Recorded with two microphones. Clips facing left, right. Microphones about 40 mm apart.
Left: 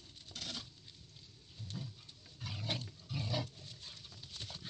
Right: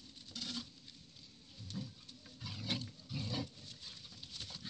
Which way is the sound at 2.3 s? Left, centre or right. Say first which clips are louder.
Even; left.